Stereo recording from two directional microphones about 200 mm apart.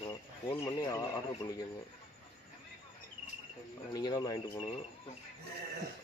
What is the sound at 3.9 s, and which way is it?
Speech, 20° left (ahead or behind).